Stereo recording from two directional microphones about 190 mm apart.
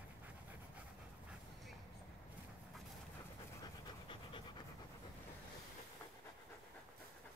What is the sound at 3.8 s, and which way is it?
Pant, 25° left (ahead or behind).